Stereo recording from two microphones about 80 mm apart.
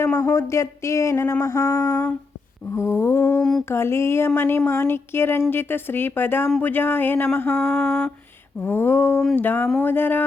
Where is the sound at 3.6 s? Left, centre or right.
Left.